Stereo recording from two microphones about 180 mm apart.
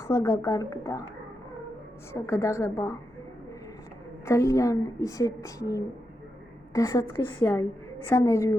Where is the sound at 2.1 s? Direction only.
15° left (ahead or behind).